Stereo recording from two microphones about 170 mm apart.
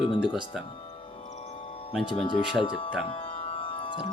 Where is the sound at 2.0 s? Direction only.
30° left (ahead or behind).